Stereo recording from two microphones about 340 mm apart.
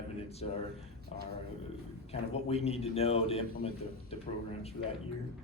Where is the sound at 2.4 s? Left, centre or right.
Centre.